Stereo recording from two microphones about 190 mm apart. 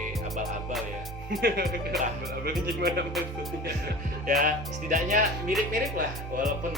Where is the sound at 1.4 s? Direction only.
55° right (ahead or behind).